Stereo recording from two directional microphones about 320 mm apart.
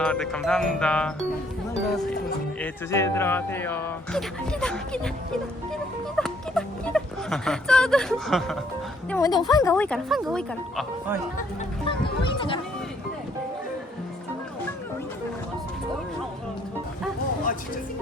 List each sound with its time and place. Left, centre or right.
0.0 s speech: centre
2.6 s speech: centre
6.1 s a sound: centre
9.0 s speech: centre
11.9 s speech: centre